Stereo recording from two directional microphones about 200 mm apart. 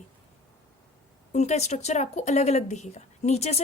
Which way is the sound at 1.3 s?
35° left (ahead or behind).